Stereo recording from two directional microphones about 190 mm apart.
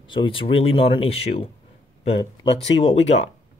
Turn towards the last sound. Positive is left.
turn(degrees=35)  # may be behind; listen again after turning